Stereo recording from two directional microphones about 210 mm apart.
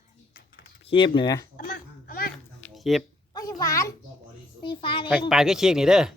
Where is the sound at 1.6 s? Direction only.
45° left (ahead or behind).